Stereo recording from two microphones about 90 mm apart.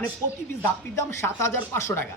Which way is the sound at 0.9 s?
30° left (ahead or behind).